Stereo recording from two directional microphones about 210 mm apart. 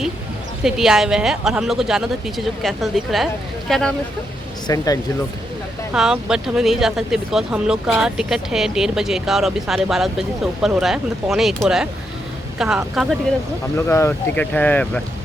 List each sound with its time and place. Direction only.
0.6 s speech: centre (ahead or behind)
4.7 s speech: 15° left (ahead or behind)
5.9 s speech: 5° right (ahead or behind)
13.7 s speech: 15° left (ahead or behind)